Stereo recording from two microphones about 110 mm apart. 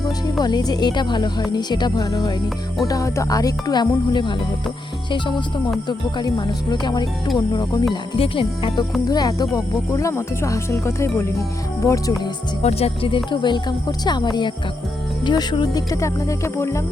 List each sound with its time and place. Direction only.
0.3 s a woman's voice: 40° left (ahead or behind)
8.2 s a woman's voice: 50° left (ahead or behind)
9.0 s speech: 35° left (ahead or behind)
12.6 s a woman's voice: 60° left (ahead or behind); by 16.8 s 25° left (ahead or behind)